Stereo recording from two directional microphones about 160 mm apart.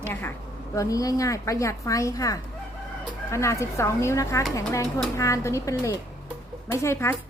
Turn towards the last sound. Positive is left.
turn(degrees=15)  # may be behind; listen again after turning